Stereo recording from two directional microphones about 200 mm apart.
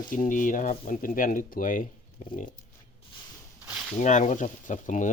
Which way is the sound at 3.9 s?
35° left (ahead or behind).